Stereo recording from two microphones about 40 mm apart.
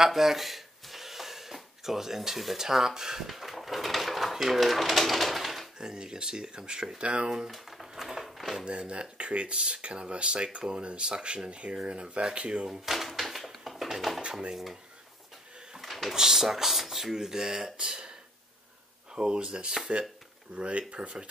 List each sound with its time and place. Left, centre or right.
0.0 s speech: centre
5.8 s speech: centre
7.0 s speech: right
7.4 s speech: centre
7.9 s a sound: centre
8.6 s speech: right
12.6 s speech: centre
12.9 s typewriter: centre
14.5 s speech: centre
15.7 s a sound: centre
16.2 s speech: centre
17.7 s speech: right
19.1 s speech: right